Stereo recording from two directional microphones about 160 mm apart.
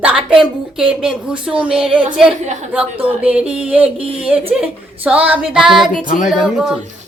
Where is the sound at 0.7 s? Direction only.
5° right (ahead or behind).